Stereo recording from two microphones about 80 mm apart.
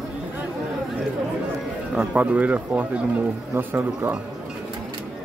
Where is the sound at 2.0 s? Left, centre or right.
Centre.